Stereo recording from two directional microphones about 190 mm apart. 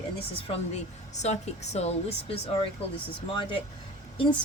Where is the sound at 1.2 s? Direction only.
35° left (ahead or behind).